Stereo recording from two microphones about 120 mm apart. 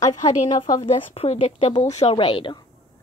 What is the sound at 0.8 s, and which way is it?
Speech, 55° left (ahead or behind).